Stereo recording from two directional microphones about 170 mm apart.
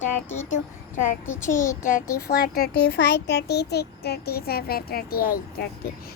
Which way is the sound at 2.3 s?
70° left (ahead or behind).